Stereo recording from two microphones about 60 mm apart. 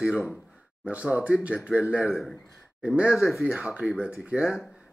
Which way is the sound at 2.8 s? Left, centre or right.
Centre.